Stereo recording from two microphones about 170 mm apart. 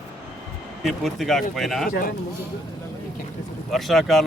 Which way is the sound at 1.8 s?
55° left (ahead or behind).